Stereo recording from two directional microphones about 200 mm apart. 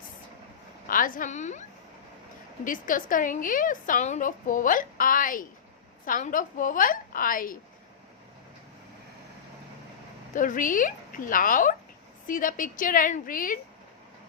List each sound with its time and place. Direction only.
0.9 s a woman's voice: 45° left (ahead or behind)
2.6 s a woman's voice: 40° left (ahead or behind)
10.3 s a woman's voice: 40° left (ahead or behind)